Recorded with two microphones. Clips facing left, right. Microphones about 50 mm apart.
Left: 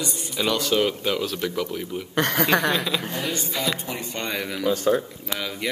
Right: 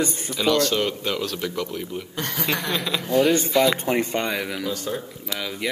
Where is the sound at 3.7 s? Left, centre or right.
Right.